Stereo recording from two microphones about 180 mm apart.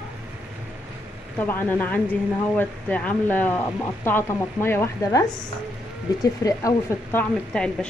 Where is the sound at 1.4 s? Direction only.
10° left (ahead or behind).